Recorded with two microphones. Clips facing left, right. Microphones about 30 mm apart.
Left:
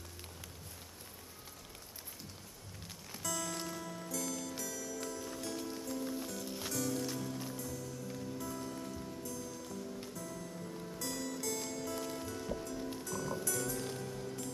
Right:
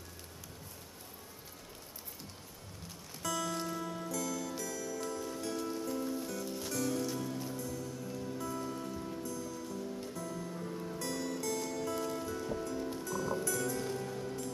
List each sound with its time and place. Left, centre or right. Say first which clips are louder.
3.2 s music: right 4 dB; centre